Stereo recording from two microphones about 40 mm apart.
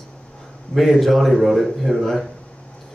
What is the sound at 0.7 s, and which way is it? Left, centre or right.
Speech, centre.